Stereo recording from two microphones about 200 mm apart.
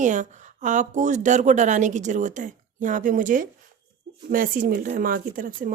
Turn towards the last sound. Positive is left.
turn(degrees=-45)  # may be behind; listen again after turning